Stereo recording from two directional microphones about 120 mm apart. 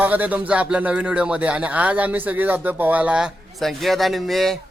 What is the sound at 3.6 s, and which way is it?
Speech, centre (ahead or behind).